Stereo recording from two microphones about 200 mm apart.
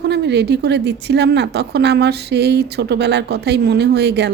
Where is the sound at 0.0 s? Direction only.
60° right (ahead or behind).